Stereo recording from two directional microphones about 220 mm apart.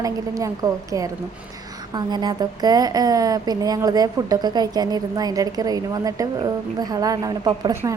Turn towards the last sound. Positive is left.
turn(degrees=-15)  # may be behind; listen again after turning